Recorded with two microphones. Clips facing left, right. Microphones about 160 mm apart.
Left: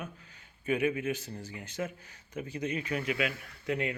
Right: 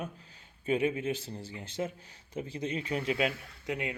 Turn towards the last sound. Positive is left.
turn(degrees=-20)  # may be behind; listen again after turning